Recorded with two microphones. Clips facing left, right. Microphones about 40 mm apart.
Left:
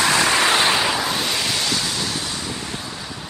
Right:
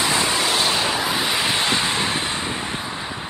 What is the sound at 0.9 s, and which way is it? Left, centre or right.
Vehicle, centre.